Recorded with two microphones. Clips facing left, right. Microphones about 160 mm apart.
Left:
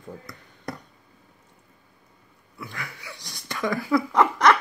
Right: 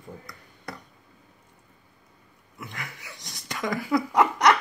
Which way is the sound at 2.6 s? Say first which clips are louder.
Left 2 dB; 20° right (ahead or behind).